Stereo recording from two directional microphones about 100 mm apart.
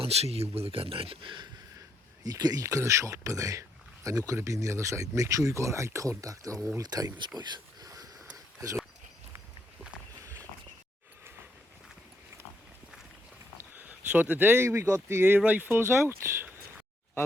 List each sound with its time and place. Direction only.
0.0 s speech: 85° right; by 1.5 s 55° right (ahead or behind)
2.2 s speech: 40° right (ahead or behind)
7.3 s a sound: 45° right (ahead or behind)
13.7 s speech: 15° right (ahead or behind)